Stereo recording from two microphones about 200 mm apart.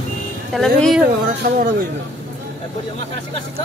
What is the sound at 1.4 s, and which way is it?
Speech, 45° right (ahead or behind).